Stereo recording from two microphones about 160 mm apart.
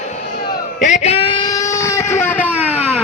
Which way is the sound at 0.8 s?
45° left (ahead or behind).